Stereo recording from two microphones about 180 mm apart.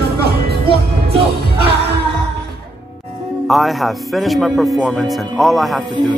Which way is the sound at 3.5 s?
Centre (ahead or behind).